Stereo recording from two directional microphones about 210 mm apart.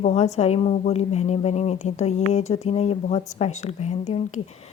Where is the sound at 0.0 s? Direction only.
30° left (ahead or behind).